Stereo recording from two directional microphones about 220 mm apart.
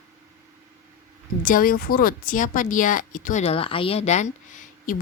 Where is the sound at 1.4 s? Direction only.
40° left (ahead or behind).